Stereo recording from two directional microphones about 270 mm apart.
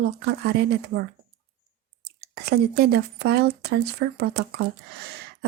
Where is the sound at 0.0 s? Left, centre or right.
Right.